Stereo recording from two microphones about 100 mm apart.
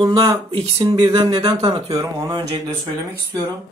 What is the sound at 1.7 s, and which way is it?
Speech, 45° right (ahead or behind).